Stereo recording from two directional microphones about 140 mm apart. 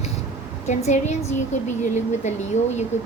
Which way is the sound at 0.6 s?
55° left (ahead or behind).